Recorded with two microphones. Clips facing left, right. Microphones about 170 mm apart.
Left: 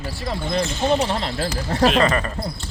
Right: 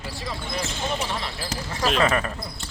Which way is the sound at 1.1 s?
65° left (ahead or behind).